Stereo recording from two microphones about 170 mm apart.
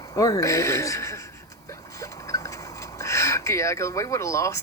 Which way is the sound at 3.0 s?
20° left (ahead or behind).